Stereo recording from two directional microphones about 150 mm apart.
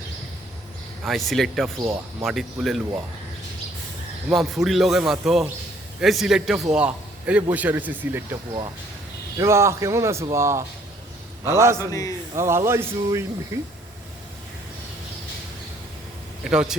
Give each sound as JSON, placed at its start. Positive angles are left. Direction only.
{"t": 1.0, "sound": "a man's voice", "side_deg": 0}
{"t": 4.3, "sound": "a man's voice", "side_deg": 0}
{"t": 9.4, "sound": "a man's voice", "side_deg": -20}
{"t": 11.8, "sound": "a man's voice", "side_deg": 25}
{"t": 12.4, "sound": "speech", "side_deg": -15}
{"t": 16.4, "sound": "speech", "side_deg": -5}